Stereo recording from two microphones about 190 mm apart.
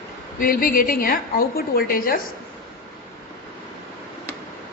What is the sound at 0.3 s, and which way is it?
A woman's voice, 50° left (ahead or behind).